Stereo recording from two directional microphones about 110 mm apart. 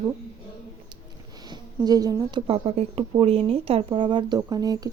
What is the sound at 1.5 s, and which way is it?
Speech, 35° right (ahead or behind).